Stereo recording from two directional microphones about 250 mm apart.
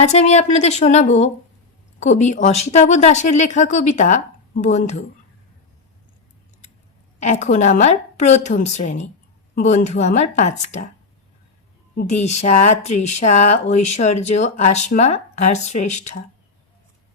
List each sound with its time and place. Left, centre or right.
0.0 s speech: left
7.2 s speech: left
12.2 s speech: left